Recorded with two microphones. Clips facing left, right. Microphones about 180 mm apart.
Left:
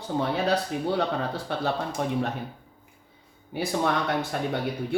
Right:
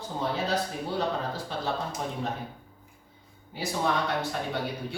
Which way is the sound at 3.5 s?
60° left (ahead or behind).